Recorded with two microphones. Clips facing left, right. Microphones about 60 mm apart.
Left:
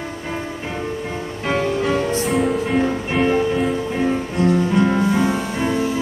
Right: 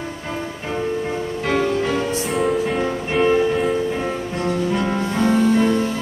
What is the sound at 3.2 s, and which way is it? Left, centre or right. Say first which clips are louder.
Music: right 1 dB; centre.